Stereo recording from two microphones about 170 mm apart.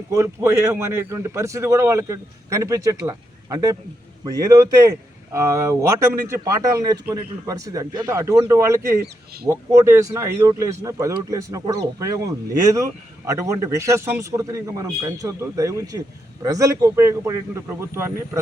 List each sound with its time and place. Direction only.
0.1 s a man's voice: 15° right (ahead or behind)
9.0 s speech: 65° right (ahead or behind)
9.5 s a man's voice: 15° right (ahead or behind)